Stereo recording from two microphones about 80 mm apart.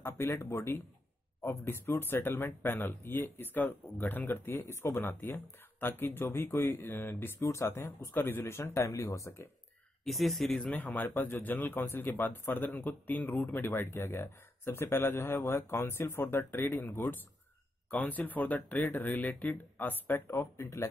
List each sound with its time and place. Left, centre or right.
0.0 s a man's voice: left
7.3 s speech: left
10.0 s speech: centre
10.7 s a man's voice: left
17.9 s a man's voice: left